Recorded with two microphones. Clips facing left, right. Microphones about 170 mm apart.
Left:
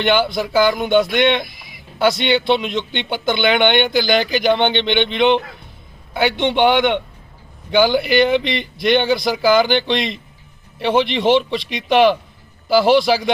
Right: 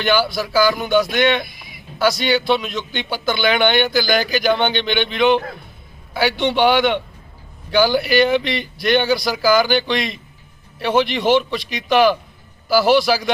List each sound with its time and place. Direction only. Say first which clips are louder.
0.0 s a man's voice: left 2 dB; 25° left (ahead or behind)